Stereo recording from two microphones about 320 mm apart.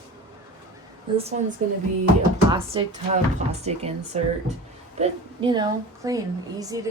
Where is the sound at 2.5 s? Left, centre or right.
Centre.